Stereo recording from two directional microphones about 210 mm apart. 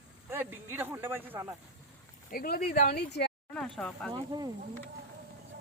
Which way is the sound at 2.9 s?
50° left (ahead or behind).